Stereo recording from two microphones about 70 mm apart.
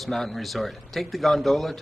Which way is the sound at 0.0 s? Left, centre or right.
Centre.